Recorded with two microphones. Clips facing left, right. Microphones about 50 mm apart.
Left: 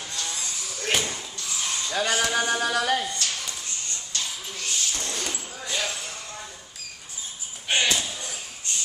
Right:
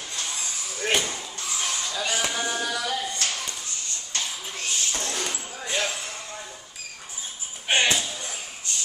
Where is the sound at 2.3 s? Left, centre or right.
Left.